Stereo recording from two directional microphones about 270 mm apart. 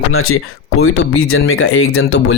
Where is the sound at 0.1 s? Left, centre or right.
Left.